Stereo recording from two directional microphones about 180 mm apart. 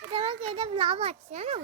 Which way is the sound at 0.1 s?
30° right (ahead or behind).